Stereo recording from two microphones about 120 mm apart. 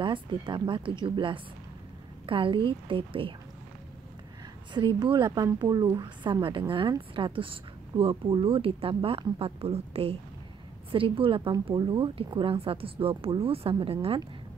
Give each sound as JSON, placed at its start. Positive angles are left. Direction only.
{"t": 0.0, "sound": "speech", "side_deg": -45}
{"t": 4.7, "sound": "a woman's voice", "side_deg": -35}